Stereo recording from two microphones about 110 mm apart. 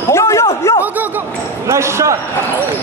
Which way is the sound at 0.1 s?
25° left (ahead or behind).